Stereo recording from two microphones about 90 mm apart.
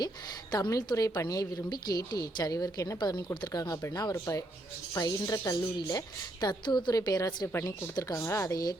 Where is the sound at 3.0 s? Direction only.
55° left (ahead or behind).